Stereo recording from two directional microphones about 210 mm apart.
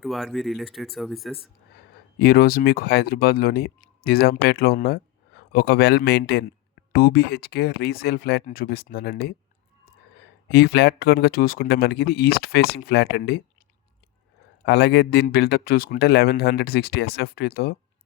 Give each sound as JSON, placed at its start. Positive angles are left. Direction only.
{"t": 0.0, "sound": "speech", "side_deg": 0}
{"t": 2.1, "sound": "speech", "side_deg": 45}
{"t": 10.5, "sound": "speech", "side_deg": 50}
{"t": 14.6, "sound": "speech", "side_deg": 50}